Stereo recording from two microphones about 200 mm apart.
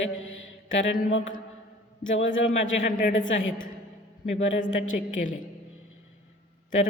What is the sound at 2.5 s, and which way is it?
Speech, 40° left (ahead or behind).